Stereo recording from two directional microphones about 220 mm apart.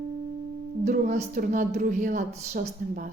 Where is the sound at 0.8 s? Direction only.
30° right (ahead or behind).